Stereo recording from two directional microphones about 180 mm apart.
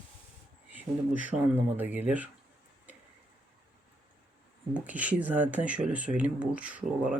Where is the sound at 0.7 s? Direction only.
10° right (ahead or behind).